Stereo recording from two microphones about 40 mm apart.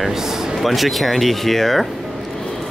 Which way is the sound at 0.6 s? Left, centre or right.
Centre.